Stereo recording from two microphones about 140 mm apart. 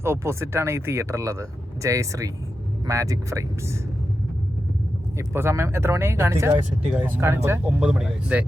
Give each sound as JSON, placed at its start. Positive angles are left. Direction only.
{"t": 0.0, "sound": "speech", "side_deg": -20}
{"t": 5.1, "sound": "speech", "side_deg": -20}
{"t": 7.7, "sound": "speech", "side_deg": -5}